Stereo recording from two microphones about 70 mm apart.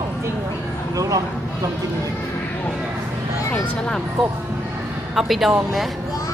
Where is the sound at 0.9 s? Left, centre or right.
Right.